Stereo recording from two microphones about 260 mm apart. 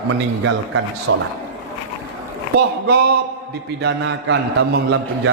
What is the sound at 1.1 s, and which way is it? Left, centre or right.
Speech, right.